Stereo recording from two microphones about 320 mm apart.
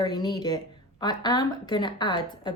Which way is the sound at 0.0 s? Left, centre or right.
Centre.